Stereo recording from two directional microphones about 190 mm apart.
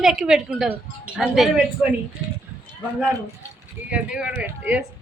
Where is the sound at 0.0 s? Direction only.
Centre (ahead or behind).